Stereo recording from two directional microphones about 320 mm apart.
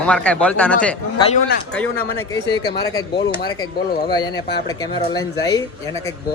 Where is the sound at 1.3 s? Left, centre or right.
Left.